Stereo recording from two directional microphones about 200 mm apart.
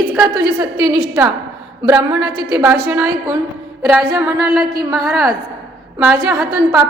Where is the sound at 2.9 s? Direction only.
5° right (ahead or behind).